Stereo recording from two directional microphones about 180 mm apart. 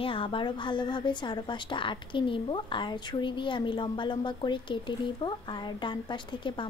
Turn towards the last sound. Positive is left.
turn(degrees=25)  # may be behind; listen again after turning